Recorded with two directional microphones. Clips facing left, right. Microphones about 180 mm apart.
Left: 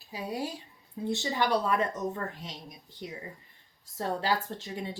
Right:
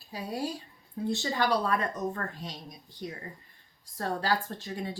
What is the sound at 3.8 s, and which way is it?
A woman's voice, 20° left (ahead or behind).